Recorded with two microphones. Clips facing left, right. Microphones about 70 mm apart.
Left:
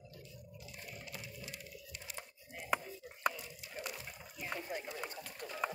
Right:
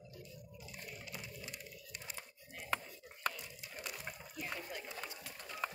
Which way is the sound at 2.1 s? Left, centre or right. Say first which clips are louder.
Left 2 dB; centre.